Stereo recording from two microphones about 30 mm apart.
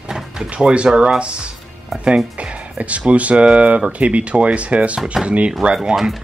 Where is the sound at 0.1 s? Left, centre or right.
Centre.